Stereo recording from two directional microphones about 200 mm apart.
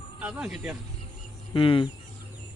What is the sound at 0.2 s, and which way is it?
Speech, 5° right (ahead or behind).